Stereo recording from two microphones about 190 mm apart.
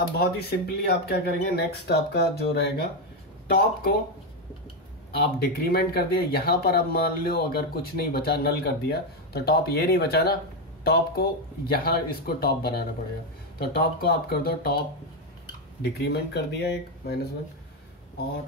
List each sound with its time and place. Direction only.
0.0 s speech: 55° left (ahead or behind)
5.1 s speech: 55° left (ahead or behind)
15.8 s speech: 55° left (ahead or behind)